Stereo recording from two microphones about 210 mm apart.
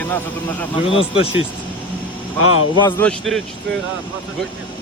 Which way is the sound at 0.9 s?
25° left (ahead or behind).